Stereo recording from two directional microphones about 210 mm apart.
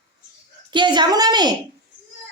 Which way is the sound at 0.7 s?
20° right (ahead or behind).